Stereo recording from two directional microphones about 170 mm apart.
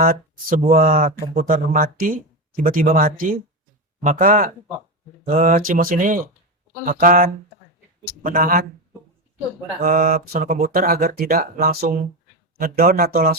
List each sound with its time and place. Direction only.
0.0 s speech: 55° right (ahead or behind)
9.8 s speech: 55° right (ahead or behind)